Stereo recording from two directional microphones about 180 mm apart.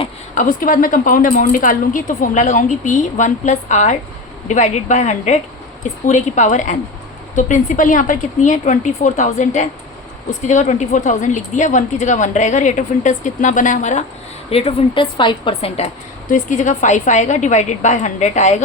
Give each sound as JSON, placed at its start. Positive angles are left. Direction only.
{"t": 0.3, "sound": "a woman's voice", "side_deg": 50}
{"t": 16.3, "sound": "a woman's voice", "side_deg": 45}